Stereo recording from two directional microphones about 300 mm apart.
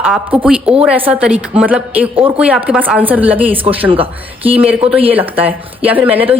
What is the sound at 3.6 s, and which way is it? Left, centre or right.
Speech, centre.